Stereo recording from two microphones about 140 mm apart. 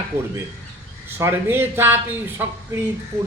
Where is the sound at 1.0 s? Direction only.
15° right (ahead or behind).